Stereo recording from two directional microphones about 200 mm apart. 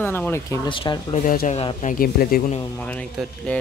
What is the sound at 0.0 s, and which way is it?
Speech, 10° left (ahead or behind).